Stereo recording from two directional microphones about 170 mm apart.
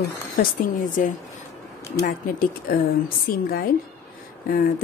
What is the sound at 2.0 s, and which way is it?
Speech, 50° left (ahead or behind).